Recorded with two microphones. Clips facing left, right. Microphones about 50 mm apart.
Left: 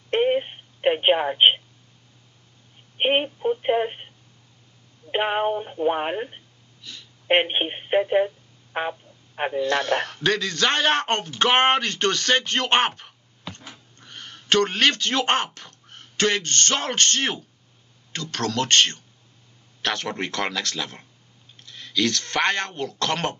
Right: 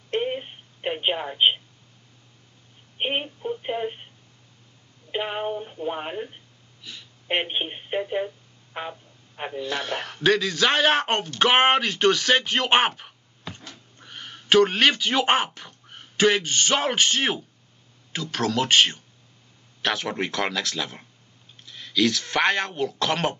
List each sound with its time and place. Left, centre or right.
0.1 s telephone: left
3.0 s speech: left
5.1 s speech: left
6.8 s a sound: centre
7.2 s speech: left
8.7 s a sound: left
9.6 s speech: centre